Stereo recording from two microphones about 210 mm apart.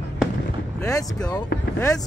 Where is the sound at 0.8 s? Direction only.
15° left (ahead or behind).